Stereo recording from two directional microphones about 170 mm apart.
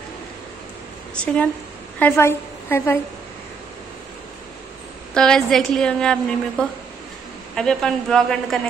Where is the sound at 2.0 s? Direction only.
15° left (ahead or behind).